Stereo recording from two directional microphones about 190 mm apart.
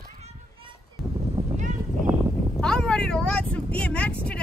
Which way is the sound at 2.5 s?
5° left (ahead or behind).